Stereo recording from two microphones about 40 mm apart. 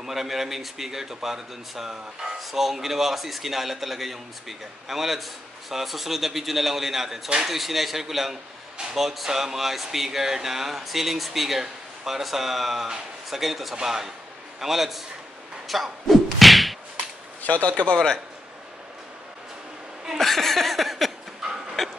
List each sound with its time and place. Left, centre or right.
0.0 s speech: centre
15.7 s whack: centre
17.4 s speech: left
17.8 s a man's voice: centre
20.2 s a sound: centre